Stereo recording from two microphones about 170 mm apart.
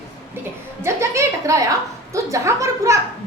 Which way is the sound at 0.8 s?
15° right (ahead or behind).